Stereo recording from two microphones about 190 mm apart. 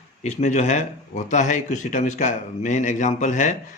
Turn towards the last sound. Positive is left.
turn(degrees=40)  # may be behind; listen again after turning